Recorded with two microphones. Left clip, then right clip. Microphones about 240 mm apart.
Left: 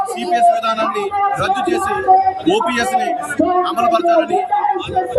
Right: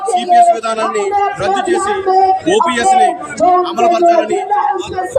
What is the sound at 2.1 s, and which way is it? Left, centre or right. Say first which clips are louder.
Speech: left 1 dB; right.